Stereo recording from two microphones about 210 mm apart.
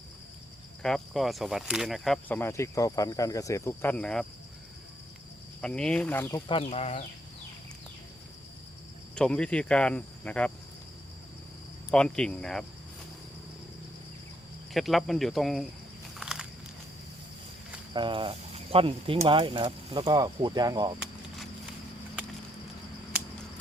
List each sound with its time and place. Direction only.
0.8 s speech: 5° left (ahead or behind)
5.6 s speech: 5° left (ahead or behind)
6.5 s speech: 30° left (ahead or behind)
9.1 s speech: 5° left (ahead or behind)
11.9 s speech: 5° left (ahead or behind)
14.7 s speech: centre (ahead or behind)
16.1 s biting: 5° right (ahead or behind)
17.9 s speech: 25° right (ahead or behind)